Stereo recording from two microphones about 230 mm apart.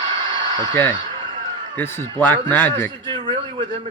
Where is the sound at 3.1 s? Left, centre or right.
Right.